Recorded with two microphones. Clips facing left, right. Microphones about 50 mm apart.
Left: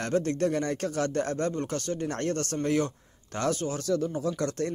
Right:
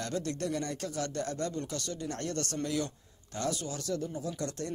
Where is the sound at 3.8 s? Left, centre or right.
Left.